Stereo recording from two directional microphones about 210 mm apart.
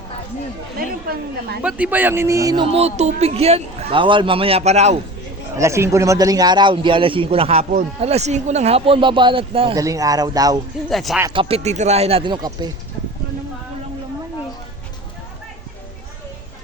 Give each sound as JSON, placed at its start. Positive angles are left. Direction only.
{"t": 1.0, "sound": "a woman's voice", "side_deg": -45}
{"t": 1.6, "sound": "a man's voice", "side_deg": -5}
{"t": 2.7, "sound": "a man's voice", "side_deg": -30}
{"t": 5.5, "sound": "a man's voice", "side_deg": -15}
{"t": 10.8, "sound": "speech", "side_deg": 0}
{"t": 11.3, "sound": "a man's voice", "side_deg": -25}